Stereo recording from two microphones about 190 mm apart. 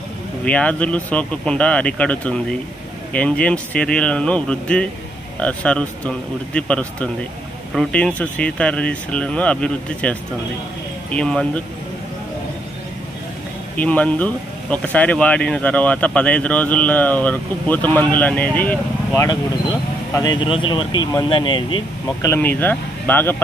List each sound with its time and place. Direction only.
0.5 s speech: 5° left (ahead or behind)
13.7 s speech: 5° left (ahead or behind)
20.2 s speech: 20° left (ahead or behind)
22.3 s speech: 10° left (ahead or behind)